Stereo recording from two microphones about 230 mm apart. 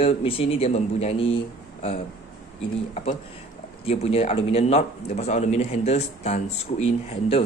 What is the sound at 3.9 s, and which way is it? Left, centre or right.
Speech, left.